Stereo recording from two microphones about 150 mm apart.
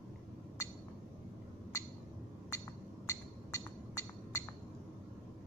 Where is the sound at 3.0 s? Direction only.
20° left (ahead or behind).